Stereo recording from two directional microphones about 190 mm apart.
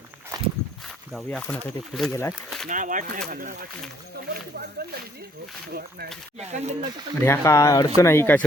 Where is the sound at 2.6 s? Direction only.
45° right (ahead or behind).